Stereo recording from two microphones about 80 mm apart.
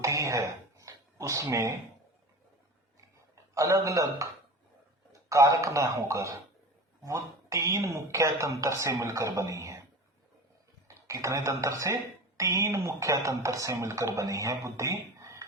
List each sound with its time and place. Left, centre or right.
0.0 s a sound: right
3.5 s a man's voice: right
5.3 s speech: right
10.8 s speech: right